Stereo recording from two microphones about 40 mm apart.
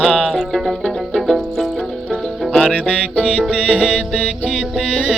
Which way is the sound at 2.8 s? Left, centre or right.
Left.